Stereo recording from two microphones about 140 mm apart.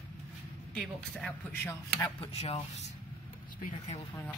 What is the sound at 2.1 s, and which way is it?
Speech, 40° left (ahead or behind).